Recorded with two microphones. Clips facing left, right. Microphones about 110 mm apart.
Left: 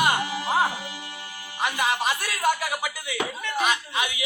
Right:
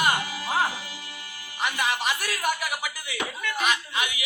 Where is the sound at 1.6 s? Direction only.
20° left (ahead or behind).